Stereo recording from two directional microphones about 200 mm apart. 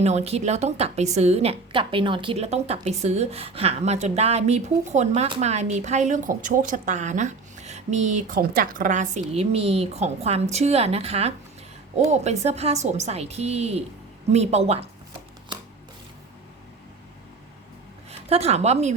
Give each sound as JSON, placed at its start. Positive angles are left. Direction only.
{"t": 0.0, "sound": "a woman's voice", "side_deg": -30}
{"t": 18.3, "sound": "a woman's voice", "side_deg": -30}